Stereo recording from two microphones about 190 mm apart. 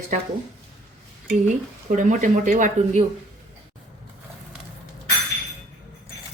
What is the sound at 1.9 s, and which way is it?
Speech, 40° right (ahead or behind).